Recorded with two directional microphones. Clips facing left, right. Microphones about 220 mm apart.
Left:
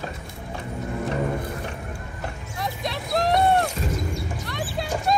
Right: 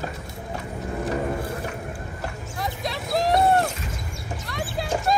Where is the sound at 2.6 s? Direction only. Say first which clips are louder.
Even; centre (ahead or behind).